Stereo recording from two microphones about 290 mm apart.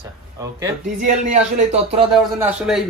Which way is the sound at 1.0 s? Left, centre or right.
Right.